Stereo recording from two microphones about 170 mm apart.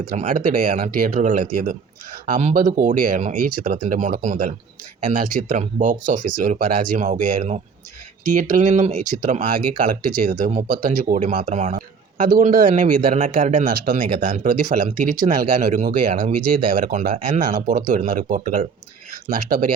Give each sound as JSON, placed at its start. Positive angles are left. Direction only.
{"t": 0.1, "sound": "speech", "side_deg": -50}
{"t": 9.7, "sound": "speech", "side_deg": -60}